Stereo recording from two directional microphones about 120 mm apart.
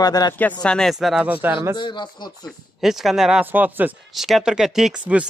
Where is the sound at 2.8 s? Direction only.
Centre (ahead or behind).